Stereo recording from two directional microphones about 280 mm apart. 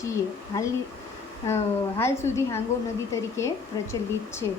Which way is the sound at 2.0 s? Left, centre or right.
Centre.